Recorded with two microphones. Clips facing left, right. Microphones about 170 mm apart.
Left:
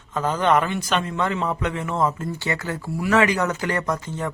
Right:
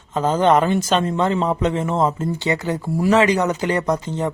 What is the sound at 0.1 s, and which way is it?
A man's voice, 25° right (ahead or behind).